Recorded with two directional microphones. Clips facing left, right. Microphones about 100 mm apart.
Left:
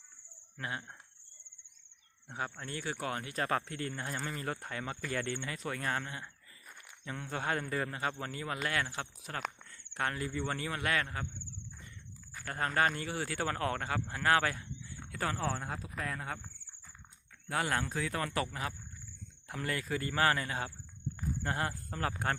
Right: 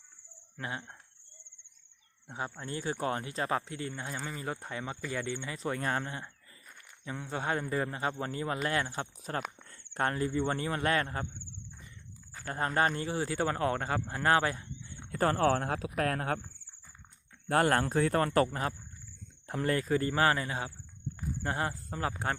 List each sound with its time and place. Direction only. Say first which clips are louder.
0.5 s speech: right 1 dB; 25° right (ahead or behind)
2.2 s speech: right 1 dB; 20° right (ahead or behind)
4.0 s speech: even; 5° right (ahead or behind)
4.4 s speech: right 1 dB; 15° right (ahead or behind)
5.5 s speech: right 6 dB; 25° right (ahead or behind)
12.3 s speech: right 2 dB; 30° right (ahead or behind)
14.1 s a sound: right 2 dB; 30° right (ahead or behind)
15.4 s speech: right 9 dB; 70° right (ahead or behind)
17.5 s speech: right 7 dB; 50° right (ahead or behind); by 22.1 s 20° right (ahead or behind)